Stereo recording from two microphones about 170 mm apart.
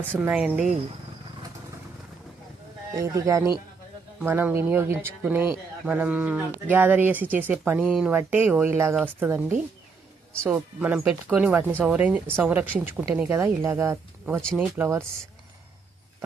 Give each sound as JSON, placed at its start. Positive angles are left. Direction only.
{"t": 0.0, "sound": "speech", "side_deg": -10}
{"t": 2.9, "sound": "speech", "side_deg": -20}
{"t": 10.4, "sound": "speech", "side_deg": -10}